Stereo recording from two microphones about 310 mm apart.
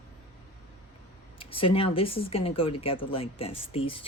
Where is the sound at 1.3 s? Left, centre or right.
Centre.